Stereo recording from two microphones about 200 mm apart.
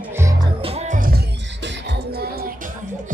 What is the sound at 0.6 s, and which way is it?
Music, 35° right (ahead or behind).